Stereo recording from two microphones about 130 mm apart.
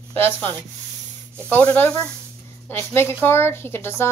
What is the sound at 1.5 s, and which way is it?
A woman's voice, 15° left (ahead or behind).